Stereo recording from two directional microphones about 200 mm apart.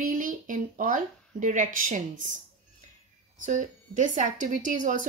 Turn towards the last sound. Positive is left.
turn(degrees=-40)  # may be behind; listen again after turning